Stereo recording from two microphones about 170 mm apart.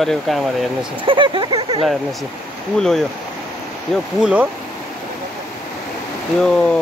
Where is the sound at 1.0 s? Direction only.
30° right (ahead or behind).